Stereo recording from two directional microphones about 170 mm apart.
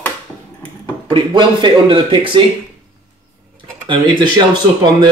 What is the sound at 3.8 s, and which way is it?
Speech, 25° right (ahead or behind).